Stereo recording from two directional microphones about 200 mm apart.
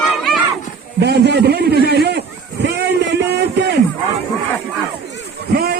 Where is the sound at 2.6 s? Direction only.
55° right (ahead or behind).